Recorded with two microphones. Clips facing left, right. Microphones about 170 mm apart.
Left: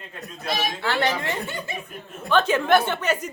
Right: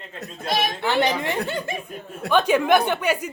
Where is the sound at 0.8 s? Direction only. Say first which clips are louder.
Right 2 dB; 15° right (ahead or behind).